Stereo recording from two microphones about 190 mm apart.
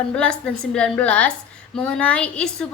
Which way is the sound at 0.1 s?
5° left (ahead or behind).